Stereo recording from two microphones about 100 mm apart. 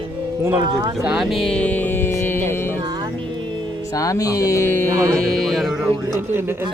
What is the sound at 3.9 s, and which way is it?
Speech, 35° left (ahead or behind).